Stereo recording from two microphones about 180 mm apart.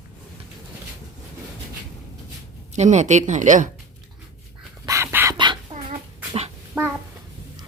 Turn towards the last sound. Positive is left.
turn(degrees=-5)  # may be behind; listen again after turning